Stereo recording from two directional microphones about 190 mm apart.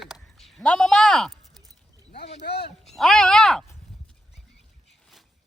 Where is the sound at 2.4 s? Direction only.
60° left (ahead or behind).